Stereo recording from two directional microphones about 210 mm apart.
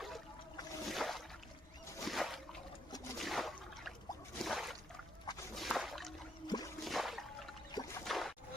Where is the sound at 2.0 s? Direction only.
Centre (ahead or behind).